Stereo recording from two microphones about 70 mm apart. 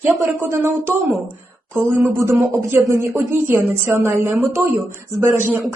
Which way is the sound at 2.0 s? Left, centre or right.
Right.